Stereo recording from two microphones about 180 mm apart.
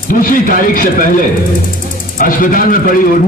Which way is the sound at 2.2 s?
50° left (ahead or behind).